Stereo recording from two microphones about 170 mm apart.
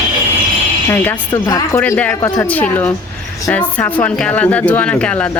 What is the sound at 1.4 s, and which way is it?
Speech, 15° left (ahead or behind).